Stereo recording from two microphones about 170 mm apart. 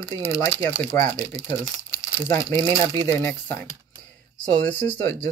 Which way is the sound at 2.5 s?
25° right (ahead or behind).